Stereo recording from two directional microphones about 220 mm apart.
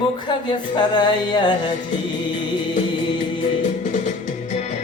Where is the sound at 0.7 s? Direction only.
20° left (ahead or behind).